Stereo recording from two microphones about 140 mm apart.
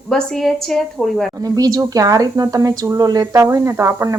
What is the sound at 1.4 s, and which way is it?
Speech, 25° right (ahead or behind).